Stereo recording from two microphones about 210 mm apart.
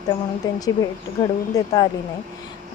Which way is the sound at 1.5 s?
15° left (ahead or behind).